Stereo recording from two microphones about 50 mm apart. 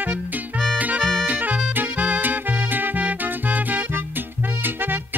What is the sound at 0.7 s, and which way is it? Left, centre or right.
Music, right.